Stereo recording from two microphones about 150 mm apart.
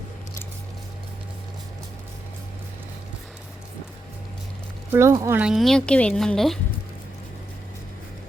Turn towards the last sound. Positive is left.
turn(degrees=5)  # may be behind; listen again after turning